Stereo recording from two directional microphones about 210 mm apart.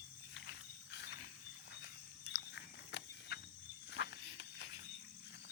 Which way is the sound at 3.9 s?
55° left (ahead or behind).